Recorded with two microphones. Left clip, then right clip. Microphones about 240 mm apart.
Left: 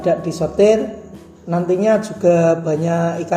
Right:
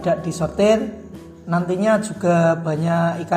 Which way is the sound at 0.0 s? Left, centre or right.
Right.